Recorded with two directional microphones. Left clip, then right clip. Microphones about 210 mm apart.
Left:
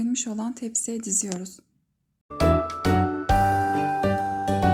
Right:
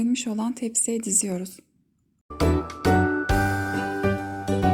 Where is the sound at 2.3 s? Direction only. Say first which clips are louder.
Left 3 dB; centre (ahead or behind).